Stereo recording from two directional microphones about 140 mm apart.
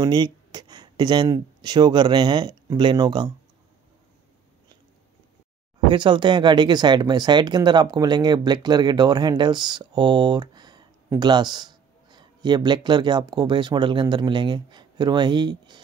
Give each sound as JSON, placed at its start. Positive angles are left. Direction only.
{"t": 0.0, "sound": "speech", "side_deg": -30}
{"t": 5.9, "sound": "a man's voice", "side_deg": -35}